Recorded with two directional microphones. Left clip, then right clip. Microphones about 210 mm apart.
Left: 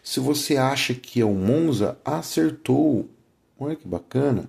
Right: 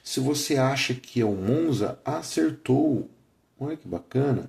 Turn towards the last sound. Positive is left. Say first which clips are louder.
# left 3 dB
turn(degrees=30)  # may be behind; listen again after turning